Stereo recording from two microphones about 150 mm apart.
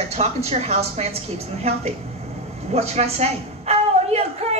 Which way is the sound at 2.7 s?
45° right (ahead or behind).